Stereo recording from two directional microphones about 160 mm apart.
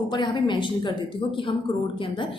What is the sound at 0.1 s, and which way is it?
A woman's voice, 30° left (ahead or behind).